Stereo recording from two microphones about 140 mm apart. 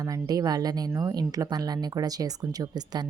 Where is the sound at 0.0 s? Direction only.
25° right (ahead or behind).